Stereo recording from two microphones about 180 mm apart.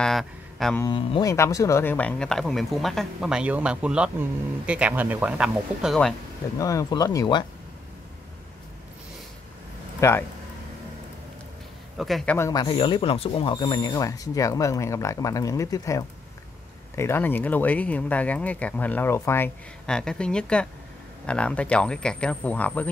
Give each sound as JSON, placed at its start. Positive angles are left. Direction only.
{"t": 0.0, "sound": "mantra", "side_deg": 0}
{"t": 0.9, "sound": "speech", "side_deg": 30}
{"t": 1.3, "sound": "speech", "side_deg": 15}
{"t": 6.6, "sound": "speech", "side_deg": 20}
{"t": 9.9, "sound": "speech", "side_deg": 15}
{"t": 12.0, "sound": "speech", "side_deg": 0}
{"t": 12.4, "sound": "speech", "side_deg": 20}